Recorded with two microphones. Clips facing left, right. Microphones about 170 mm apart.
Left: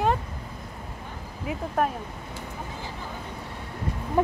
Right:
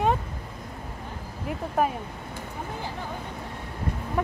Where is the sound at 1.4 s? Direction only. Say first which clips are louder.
Even; centre (ahead or behind).